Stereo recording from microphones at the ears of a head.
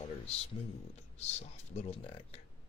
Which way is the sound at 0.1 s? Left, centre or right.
Left.